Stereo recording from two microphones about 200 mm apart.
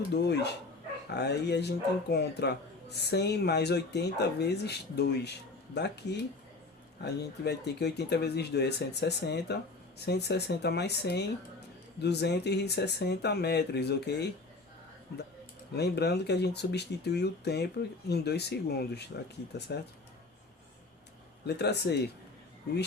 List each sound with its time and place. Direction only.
0.1 s speech: 55° left (ahead or behind)
15.7 s speech: 55° left (ahead or behind)
21.4 s speech: 55° left (ahead or behind)